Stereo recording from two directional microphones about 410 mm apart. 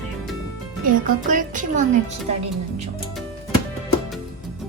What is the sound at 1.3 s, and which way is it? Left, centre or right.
Speech, centre.